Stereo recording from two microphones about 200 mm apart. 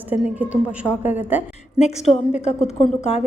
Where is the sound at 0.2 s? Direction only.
5° right (ahead or behind).